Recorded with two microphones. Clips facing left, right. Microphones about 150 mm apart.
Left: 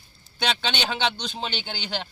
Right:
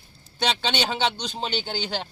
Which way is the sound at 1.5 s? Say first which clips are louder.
Right 5 dB; 40° right (ahead or behind).